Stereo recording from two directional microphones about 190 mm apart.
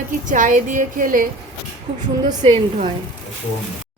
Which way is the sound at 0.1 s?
40° right (ahead or behind).